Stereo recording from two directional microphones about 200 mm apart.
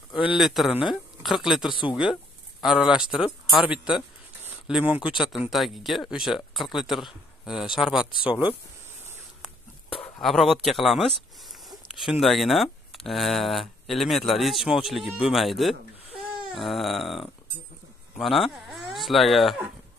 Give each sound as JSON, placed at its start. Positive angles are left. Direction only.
{"t": 0.3, "sound": "speech", "side_deg": 0}
{"t": 1.7, "sound": "speech", "side_deg": 25}
{"t": 2.6, "sound": "speech", "side_deg": -5}
{"t": 10.2, "sound": "speech", "side_deg": 0}